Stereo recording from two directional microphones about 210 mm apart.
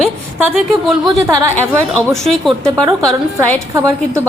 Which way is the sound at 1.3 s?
15° right (ahead or behind).